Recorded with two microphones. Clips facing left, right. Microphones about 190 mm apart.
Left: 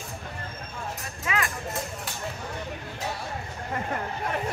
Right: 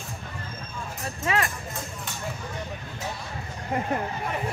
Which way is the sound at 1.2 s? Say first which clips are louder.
Right 3 dB; 40° right (ahead or behind).